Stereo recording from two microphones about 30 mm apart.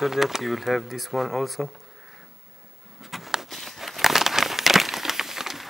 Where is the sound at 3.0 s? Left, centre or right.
Centre.